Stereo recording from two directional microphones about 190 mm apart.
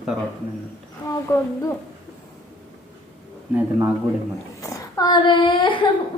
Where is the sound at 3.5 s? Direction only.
10° right (ahead or behind).